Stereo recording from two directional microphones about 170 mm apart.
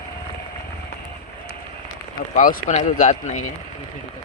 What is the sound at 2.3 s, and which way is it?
Speech, 50° left (ahead or behind).